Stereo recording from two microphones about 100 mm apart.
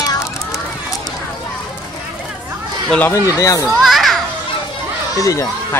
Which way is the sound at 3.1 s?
35° left (ahead or behind).